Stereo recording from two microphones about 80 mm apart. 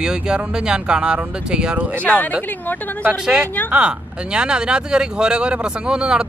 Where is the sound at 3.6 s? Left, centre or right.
Centre.